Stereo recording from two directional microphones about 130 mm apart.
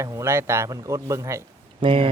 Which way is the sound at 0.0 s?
20° right (ahead or behind).